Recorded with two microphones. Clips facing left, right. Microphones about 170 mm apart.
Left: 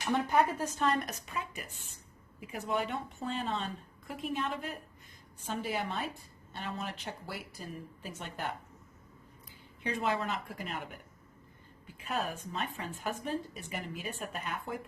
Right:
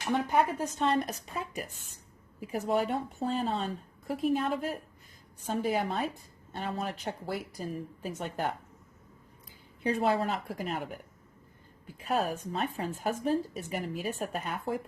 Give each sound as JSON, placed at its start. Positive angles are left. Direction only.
{"t": 0.0, "sound": "speech", "side_deg": -15}
{"t": 0.8, "sound": "speech", "side_deg": -30}
{"t": 9.8, "sound": "speech", "side_deg": -40}
{"t": 11.9, "sound": "speech", "side_deg": -40}